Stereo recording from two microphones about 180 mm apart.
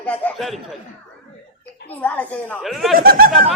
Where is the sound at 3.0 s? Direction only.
55° right (ahead or behind).